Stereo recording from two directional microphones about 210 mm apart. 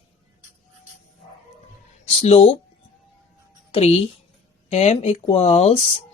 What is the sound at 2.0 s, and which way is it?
Speech, 30° left (ahead or behind).